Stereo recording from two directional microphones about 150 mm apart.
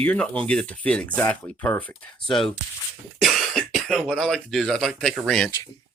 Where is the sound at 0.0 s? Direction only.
10° left (ahead or behind).